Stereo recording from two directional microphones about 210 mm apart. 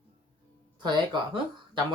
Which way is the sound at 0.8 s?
20° right (ahead or behind).